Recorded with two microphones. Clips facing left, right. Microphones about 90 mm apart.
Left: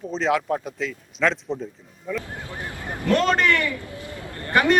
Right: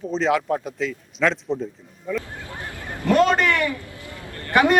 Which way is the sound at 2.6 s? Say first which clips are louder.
Left 2 dB; 20° left (ahead or behind).